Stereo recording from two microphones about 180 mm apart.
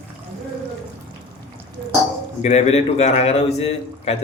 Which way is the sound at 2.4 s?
35° left (ahead or behind).